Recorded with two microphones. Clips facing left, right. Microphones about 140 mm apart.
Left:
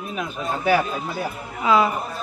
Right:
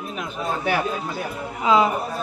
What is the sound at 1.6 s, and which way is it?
Speech, 20° right (ahead or behind).